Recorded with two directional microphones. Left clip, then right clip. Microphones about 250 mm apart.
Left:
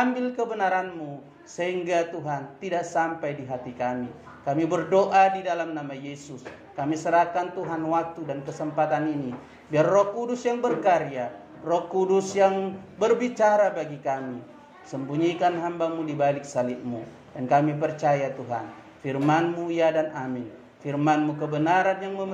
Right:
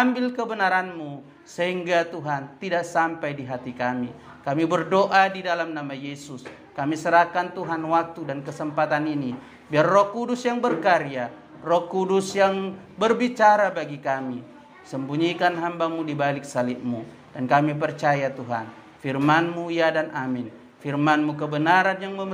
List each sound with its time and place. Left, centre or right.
0.0 s speech: right
17.5 s speech: right